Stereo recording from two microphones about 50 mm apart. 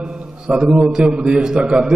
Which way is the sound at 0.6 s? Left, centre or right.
Centre.